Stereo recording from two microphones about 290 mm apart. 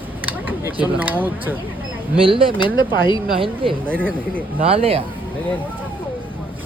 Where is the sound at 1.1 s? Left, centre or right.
Centre.